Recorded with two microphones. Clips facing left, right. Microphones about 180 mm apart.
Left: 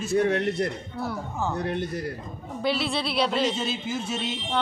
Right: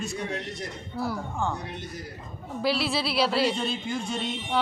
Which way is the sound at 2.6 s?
Centre (ahead or behind).